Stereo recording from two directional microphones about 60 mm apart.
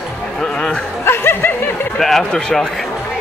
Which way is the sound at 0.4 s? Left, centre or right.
Centre.